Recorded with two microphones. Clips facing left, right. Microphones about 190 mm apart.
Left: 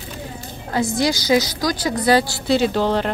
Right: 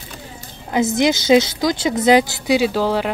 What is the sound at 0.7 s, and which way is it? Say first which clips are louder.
A woman's voice: right 3 dB; 20° right (ahead or behind).